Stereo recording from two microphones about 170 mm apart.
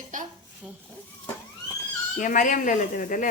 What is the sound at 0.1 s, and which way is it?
Dishes, 50° right (ahead or behind).